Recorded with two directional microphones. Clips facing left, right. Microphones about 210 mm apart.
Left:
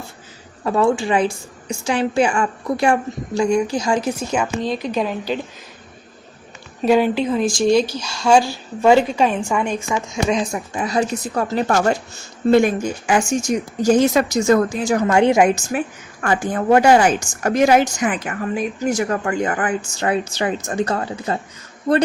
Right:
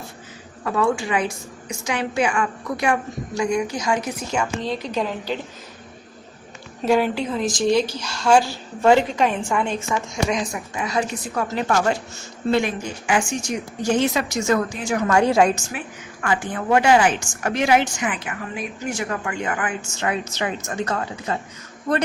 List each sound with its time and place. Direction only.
0.6 s a woman's voice: 30° left (ahead or behind)
6.8 s speech: 20° left (ahead or behind)
10.2 s a woman's voice: 30° left (ahead or behind)
10.8 s a woman's voice: 40° left (ahead or behind)
15.0 s a woman's voice: 25° left (ahead or behind)
15.7 s a woman's voice: 45° left (ahead or behind)